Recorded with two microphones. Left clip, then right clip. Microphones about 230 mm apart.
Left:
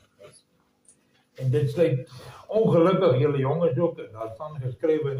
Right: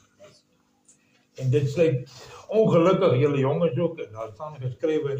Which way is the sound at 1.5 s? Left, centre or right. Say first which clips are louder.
Right 1 dB; right.